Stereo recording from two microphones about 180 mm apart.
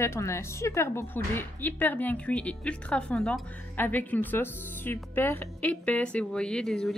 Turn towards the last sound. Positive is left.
turn(degrees=5)  # may be behind; listen again after turning